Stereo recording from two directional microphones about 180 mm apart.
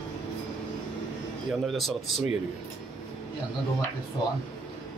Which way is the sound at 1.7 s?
Centre (ahead or behind).